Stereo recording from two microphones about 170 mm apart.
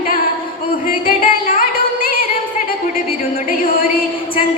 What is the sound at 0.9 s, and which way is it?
Music, 60° left (ahead or behind).